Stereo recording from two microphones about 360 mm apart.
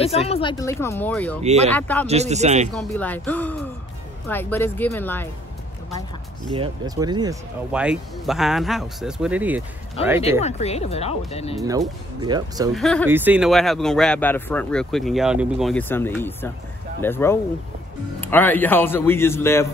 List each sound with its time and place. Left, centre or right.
0.0 s speech: centre
1.4 s speech: centre
1.7 s speech: centre
2.0 s speech: centre
2.7 s speech: centre
6.5 s speech: centre
10.0 s speech: centre
11.6 s speech: centre
12.7 s speech: centre